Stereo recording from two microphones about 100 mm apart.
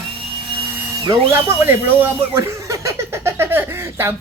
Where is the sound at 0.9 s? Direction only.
50° right (ahead or behind).